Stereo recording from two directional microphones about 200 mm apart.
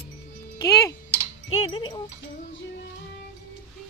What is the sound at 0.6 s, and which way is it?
Speech, 15° left (ahead or behind).